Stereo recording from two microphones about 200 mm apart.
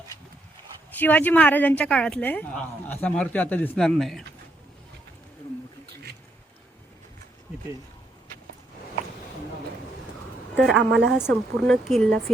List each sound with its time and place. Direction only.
0.9 s a woman's voice: 10° left (ahead or behind)
5.8 s a sound: 50° right (ahead or behind)
10.8 s a woman's voice: 60° right (ahead or behind)
11.3 s a woman's voice: 5° left (ahead or behind)